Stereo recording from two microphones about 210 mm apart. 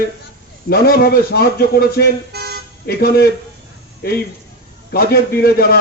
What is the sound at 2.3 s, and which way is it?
Toot, 50° right (ahead or behind).